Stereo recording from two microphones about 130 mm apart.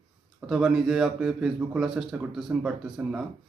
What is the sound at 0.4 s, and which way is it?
A man's voice, centre (ahead or behind).